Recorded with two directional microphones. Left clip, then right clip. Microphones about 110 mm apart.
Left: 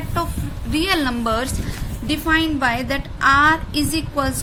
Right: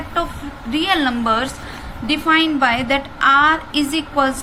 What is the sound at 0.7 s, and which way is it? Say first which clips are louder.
A woman's voice: right 2 dB; 40° left (ahead or behind).